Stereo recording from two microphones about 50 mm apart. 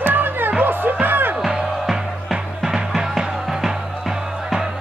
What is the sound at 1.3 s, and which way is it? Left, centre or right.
Music, centre.